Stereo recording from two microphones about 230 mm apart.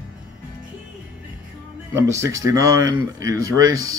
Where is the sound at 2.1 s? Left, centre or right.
Centre.